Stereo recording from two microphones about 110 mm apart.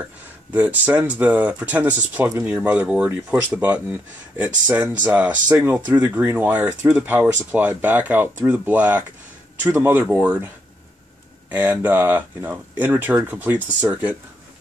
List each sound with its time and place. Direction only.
0.5 s speech: 15° right (ahead or behind)